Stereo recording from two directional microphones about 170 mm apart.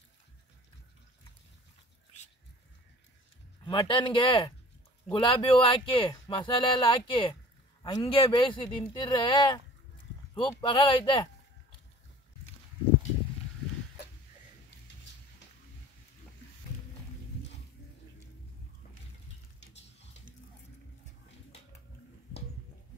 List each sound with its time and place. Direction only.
3.6 s speech: 30° left (ahead or behind)